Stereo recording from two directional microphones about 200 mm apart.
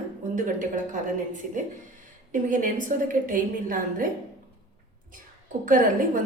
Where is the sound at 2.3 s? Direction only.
40° right (ahead or behind).